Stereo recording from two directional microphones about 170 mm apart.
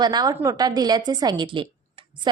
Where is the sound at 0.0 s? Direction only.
25° right (ahead or behind).